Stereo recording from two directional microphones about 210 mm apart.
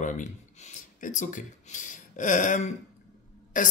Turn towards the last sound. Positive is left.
turn(degrees=40)  # may be behind; listen again after turning